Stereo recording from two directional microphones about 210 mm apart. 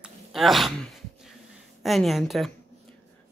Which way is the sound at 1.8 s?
Centre (ahead or behind).